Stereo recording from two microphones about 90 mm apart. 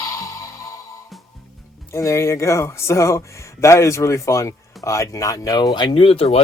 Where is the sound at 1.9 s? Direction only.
30° left (ahead or behind).